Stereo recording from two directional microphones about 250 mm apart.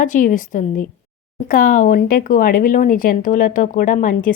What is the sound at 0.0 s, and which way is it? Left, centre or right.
Speech, left.